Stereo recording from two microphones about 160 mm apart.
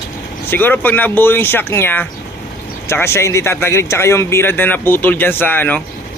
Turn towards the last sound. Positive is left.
turn(degrees=10)  # may be behind; listen again after turning